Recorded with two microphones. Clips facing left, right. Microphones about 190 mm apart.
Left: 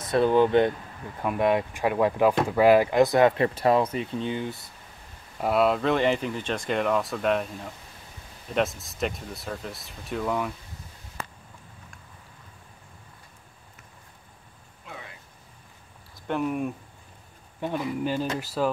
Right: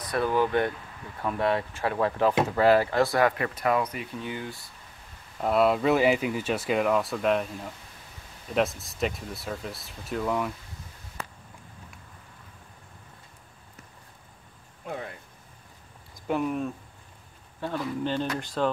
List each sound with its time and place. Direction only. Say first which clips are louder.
0.0 s speech: left 5 dB; 25° left (ahead or behind)
5.4 s speech: even; centre (ahead or behind)
14.9 s a sound: right 8 dB; 50° right (ahead or behind)
16.3 s speech: even; centre (ahead or behind)
17.6 s speech: left 2 dB; 15° left (ahead or behind)